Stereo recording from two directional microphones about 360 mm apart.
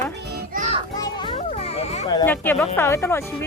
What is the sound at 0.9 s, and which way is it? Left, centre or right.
A child's voice, centre.